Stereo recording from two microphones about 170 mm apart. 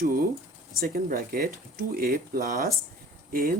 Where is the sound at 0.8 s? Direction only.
60° right (ahead or behind).